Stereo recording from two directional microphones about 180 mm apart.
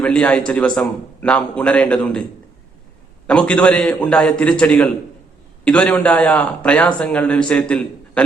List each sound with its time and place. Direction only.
0.0 s a man's voice: 5° left (ahead or behind)
3.2 s a man's voice: 5° left (ahead or behind)